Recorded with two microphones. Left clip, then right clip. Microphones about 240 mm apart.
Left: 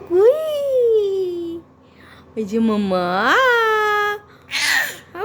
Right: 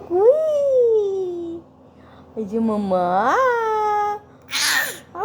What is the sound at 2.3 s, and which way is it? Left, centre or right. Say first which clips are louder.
Speech: left 2 dB; left.